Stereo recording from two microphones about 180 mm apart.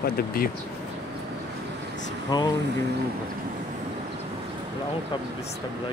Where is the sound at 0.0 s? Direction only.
55° left (ahead or behind).